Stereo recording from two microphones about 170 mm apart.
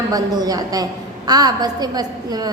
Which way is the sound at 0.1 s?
20° right (ahead or behind).